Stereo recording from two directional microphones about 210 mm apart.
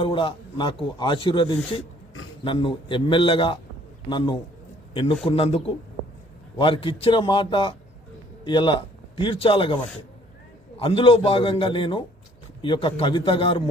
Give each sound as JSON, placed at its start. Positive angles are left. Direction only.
{"t": 0.0, "sound": "a man's voice", "side_deg": 25}
{"t": 5.2, "sound": "a man's voice", "side_deg": 30}